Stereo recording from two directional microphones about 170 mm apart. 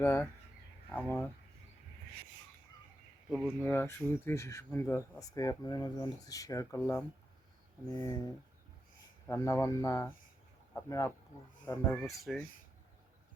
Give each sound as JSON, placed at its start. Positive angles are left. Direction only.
{"t": 0.0, "sound": "speech", "side_deg": 15}
{"t": 3.2, "sound": "speech", "side_deg": -5}
{"t": 3.6, "sound": "speech", "side_deg": 10}
{"t": 12.3, "sound": "speech", "side_deg": 0}